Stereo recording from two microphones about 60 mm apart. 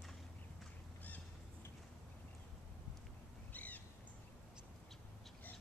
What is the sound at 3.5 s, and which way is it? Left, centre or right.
Bird, left.